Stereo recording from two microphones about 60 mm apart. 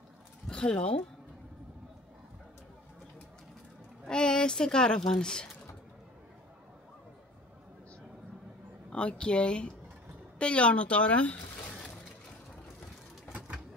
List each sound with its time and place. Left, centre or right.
0.5 s speech: centre
4.0 s speech: centre
8.9 s speech: centre